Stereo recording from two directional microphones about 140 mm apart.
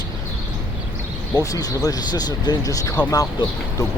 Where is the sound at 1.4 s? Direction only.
25° left (ahead or behind).